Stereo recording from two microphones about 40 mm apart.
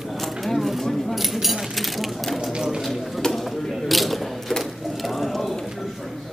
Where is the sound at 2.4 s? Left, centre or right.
Centre.